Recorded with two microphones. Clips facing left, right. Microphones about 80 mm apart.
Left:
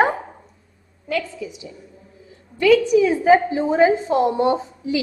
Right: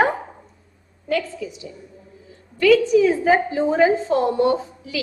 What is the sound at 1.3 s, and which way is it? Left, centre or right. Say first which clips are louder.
Speech: right 1 dB; left.